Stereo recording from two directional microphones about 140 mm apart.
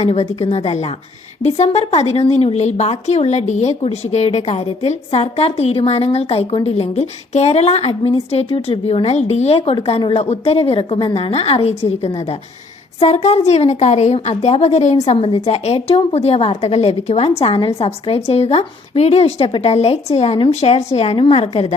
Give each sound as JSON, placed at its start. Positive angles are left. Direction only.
{"t": 0.0, "sound": "a woman's voice", "side_deg": 50}